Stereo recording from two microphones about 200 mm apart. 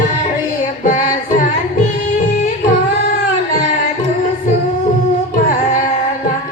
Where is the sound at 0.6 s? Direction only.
45° left (ahead or behind).